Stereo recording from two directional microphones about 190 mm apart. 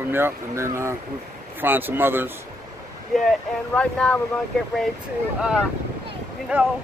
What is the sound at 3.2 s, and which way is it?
Speech, 5° left (ahead or behind).